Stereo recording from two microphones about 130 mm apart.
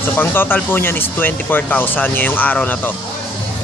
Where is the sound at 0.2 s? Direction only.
15° left (ahead or behind).